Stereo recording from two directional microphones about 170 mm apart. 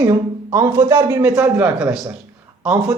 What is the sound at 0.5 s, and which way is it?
Speech, 15° right (ahead or behind).